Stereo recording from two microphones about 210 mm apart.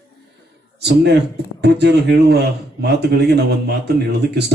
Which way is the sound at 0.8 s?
50° right (ahead or behind).